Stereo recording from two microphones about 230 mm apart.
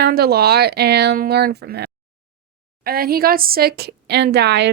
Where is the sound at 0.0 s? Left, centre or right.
Right.